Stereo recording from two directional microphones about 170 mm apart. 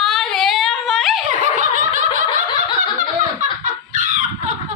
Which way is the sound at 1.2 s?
50° right (ahead or behind).